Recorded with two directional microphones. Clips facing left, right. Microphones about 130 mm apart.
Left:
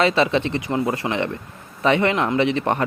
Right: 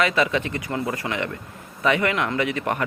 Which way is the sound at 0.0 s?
30° left (ahead or behind).